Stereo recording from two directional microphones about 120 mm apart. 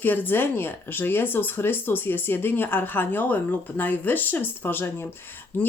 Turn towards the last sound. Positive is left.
turn(degrees=15)  # may be behind; listen again after turning